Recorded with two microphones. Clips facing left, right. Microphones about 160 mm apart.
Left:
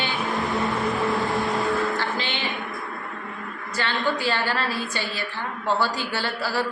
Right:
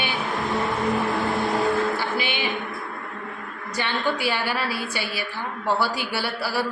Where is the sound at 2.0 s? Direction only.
10° right (ahead or behind).